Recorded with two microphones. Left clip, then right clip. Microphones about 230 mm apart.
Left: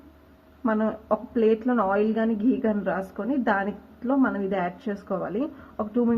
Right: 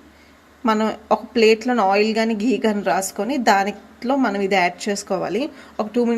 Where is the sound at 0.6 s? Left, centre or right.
Right.